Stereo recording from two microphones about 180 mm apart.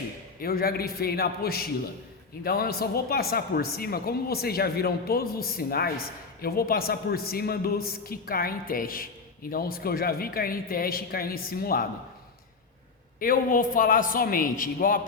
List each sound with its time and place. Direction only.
0.4 s speech: 55° left (ahead or behind)
13.1 s a man's voice: 50° left (ahead or behind)